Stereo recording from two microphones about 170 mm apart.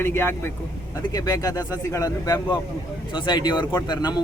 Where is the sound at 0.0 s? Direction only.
15° left (ahead or behind).